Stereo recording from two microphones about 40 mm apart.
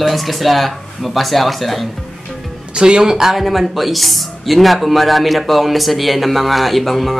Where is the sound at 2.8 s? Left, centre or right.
Right.